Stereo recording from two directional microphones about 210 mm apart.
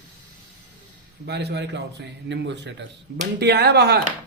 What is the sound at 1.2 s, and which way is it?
A woman's voice, 50° right (ahead or behind).